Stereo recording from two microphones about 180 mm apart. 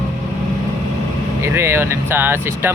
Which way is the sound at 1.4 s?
15° right (ahead or behind).